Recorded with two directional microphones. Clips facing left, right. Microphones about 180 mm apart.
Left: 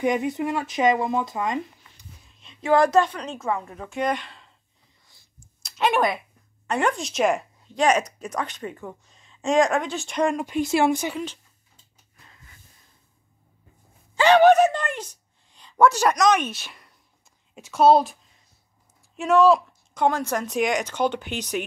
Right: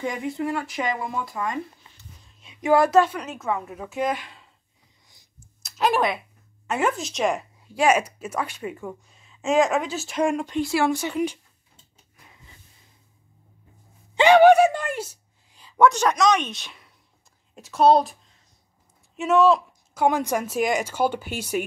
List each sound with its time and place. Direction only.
0.0 s speech: 20° left (ahead or behind)
2.4 s a woman's voice: 10° right (ahead or behind)
5.6 s a sound: centre (ahead or behind)
6.7 s a woman's voice: 5° right (ahead or behind)
10.6 s speech: 20° left (ahead or behind)
12.3 s gasp: 15° right (ahead or behind)
14.1 s a sound: 15° right (ahead or behind)
15.9 s speech: 10° left (ahead or behind)
19.1 s a woman's voice: centre (ahead or behind)